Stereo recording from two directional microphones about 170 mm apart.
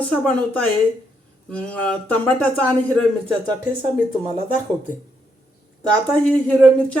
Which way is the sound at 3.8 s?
30° right (ahead or behind).